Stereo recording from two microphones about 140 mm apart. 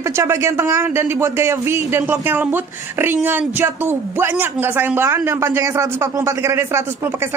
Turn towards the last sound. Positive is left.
turn(degrees=-15)  # may be behind; listen again after turning